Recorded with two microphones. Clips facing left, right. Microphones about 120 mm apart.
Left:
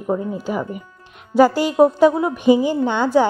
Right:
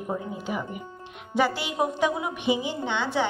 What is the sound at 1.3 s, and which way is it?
A woman's voice, 40° left (ahead or behind).